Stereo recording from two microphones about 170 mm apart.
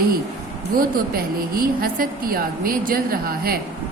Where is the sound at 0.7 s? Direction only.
60° right (ahead or behind).